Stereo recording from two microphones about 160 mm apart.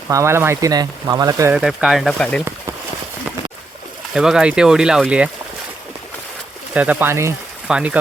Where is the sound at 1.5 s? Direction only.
5° right (ahead or behind).